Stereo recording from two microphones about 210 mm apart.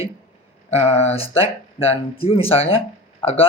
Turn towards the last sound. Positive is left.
turn(degrees=30)  # may be behind; listen again after turning